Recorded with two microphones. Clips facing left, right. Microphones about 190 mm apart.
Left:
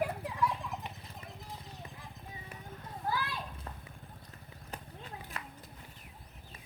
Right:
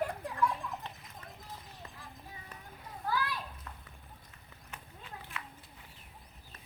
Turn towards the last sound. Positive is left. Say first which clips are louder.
# left 1 dB
turn(degrees=40)  # may be behind; listen again after turning